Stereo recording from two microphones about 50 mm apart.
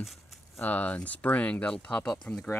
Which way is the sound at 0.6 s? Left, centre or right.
Left.